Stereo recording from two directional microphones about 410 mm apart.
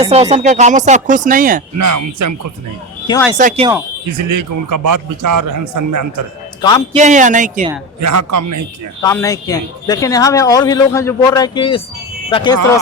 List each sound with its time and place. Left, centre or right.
0.0 s speech: centre
1.8 s a man's voice: right
3.3 s speech: centre
4.3 s a man's voice: right
6.6 s a man's voice: centre
6.9 s speech: centre
8.0 s a man's voice: right
9.0 s a man's voice: centre